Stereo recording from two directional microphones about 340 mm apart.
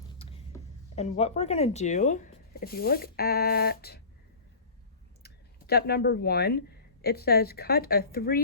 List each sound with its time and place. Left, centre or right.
0.2 s speech: centre
5.2 s speech: left